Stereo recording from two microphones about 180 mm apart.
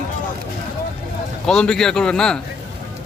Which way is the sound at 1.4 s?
5° left (ahead or behind).